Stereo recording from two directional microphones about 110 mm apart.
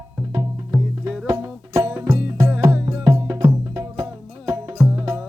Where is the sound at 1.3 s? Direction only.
30° right (ahead or behind).